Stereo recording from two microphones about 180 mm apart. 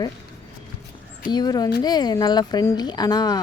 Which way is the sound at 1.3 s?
25° left (ahead or behind).